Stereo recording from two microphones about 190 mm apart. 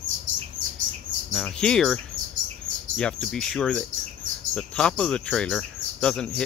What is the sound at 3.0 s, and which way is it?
Speech, 5° left (ahead or behind).